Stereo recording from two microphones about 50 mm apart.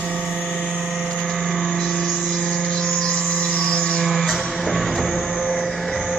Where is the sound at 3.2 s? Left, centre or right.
Centre.